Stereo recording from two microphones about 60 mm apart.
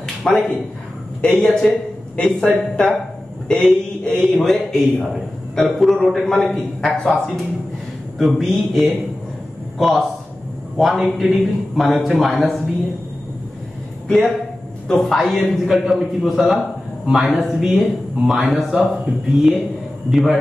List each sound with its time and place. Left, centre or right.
0.2 s a man's voice: centre
1.2 s a man's voice: centre
14.9 s a man's voice: centre